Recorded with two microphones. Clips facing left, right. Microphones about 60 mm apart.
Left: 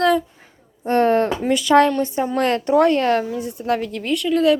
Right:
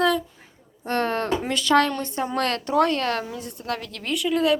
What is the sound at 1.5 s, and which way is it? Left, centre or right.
A woman's voice, centre.